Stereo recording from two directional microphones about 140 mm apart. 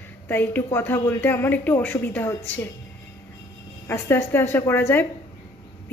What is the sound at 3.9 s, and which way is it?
A woman's voice, 15° left (ahead or behind).